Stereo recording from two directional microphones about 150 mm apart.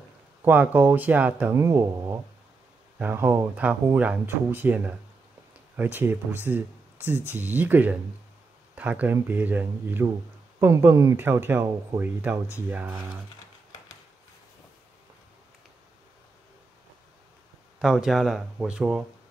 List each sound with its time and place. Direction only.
0.4 s speech: 10° right (ahead or behind)
17.7 s speech: 5° right (ahead or behind)